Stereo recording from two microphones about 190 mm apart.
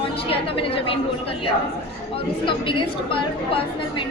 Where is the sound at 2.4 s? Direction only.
25° left (ahead or behind).